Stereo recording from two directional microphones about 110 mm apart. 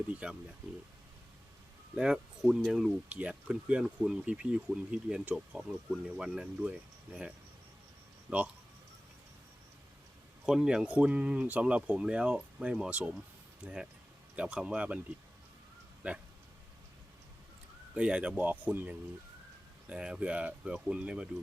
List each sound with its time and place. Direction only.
0.1 s speech: 10° right (ahead or behind)
2.0 s speech: 5° right (ahead or behind)
10.4 s speech: 5° right (ahead or behind)
14.3 s speech: 10° right (ahead or behind)
16.0 s speech: 10° right (ahead or behind)
17.9 s speech: 10° right (ahead or behind)